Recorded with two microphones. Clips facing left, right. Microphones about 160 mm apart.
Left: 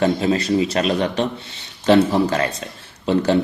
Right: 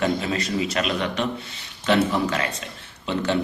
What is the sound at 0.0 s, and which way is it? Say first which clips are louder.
Speech: left 6 dB; 30° left (ahead or behind).